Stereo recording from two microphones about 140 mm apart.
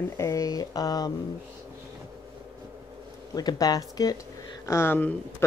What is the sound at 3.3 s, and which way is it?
Speech, 25° left (ahead or behind).